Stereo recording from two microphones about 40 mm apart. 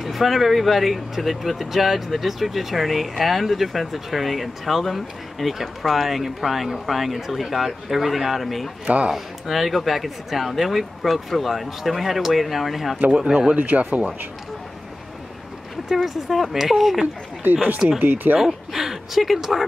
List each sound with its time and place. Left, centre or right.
0.0 s speech: centre
8.8 s speech: right
9.1 s speech: centre
13.1 s speech: centre
13.6 s speech: right
16.1 s speech: centre
18.0 s speech: right
18.4 s speech: centre